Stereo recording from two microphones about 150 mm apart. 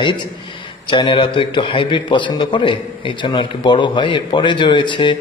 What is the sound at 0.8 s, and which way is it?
A man's voice, 35° left (ahead or behind).